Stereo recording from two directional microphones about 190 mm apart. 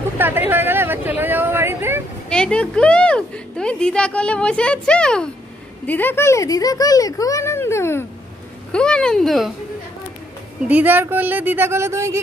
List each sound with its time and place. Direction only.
0.2 s speech: 10° right (ahead or behind)
2.2 s a woman's voice: 5° left (ahead or behind)
10.7 s speech: 10° right (ahead or behind)